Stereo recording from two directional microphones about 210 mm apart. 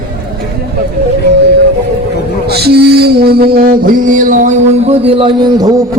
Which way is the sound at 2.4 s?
50° right (ahead or behind).